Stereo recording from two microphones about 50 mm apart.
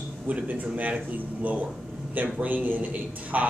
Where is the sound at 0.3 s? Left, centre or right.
Right.